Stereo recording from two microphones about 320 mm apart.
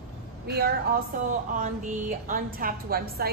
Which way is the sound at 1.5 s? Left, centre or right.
Right.